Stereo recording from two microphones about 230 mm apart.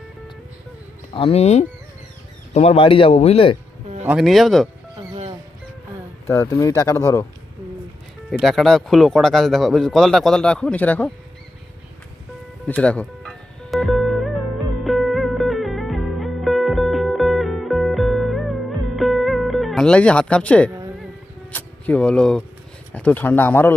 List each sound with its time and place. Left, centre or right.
1.1 s speech: left
4.0 s speech: centre
6.2 s speech: centre
8.3 s speech: centre
12.6 s music: centre
21.5 s speech: centre